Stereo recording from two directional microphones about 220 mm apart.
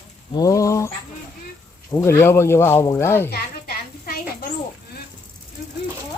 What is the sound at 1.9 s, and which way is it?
Speech, 15° left (ahead or behind).